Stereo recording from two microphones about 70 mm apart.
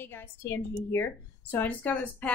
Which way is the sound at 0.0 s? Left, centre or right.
Left.